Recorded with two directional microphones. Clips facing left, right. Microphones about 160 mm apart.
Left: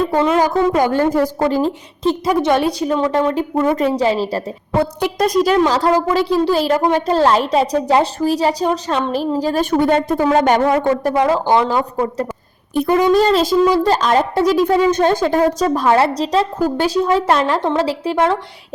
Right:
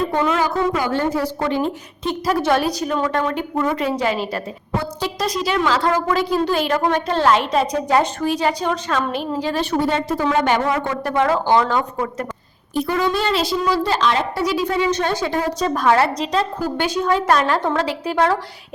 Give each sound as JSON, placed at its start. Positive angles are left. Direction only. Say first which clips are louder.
{"t": 0.3, "sound": "a woman's voice", "louder": "left 5 dB", "side_deg": 40}
{"t": 2.2, "sound": "a woman's voice", "louder": "left 1 dB", "side_deg": 20}
{"t": 3.8, "sound": "a woman's voice", "louder": "left 5 dB", "side_deg": 35}
{"t": 4.8, "sound": "speech", "louder": "left 9 dB", "side_deg": 60}
{"t": 5.5, "sound": "a woman's voice", "louder": "left 4 dB", "side_deg": 20}
{"t": 6.1, "sound": "a woman's voice", "louder": "left 4 dB", "side_deg": 30}
{"t": 11.1, "sound": "a woman's voice", "louder": "right 1 dB", "side_deg": 15}
{"t": 12.7, "sound": "speech", "louder": "left 6 dB", "side_deg": 55}
{"t": 13.1, "sound": "speech", "louder": "left 7 dB", "side_deg": 40}
{"t": 15.7, "sound": "a woman's voice", "louder": "left 2 dB", "side_deg": 25}